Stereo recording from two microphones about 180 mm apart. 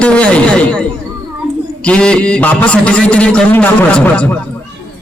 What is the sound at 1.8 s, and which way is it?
A man's voice, 5° left (ahead or behind).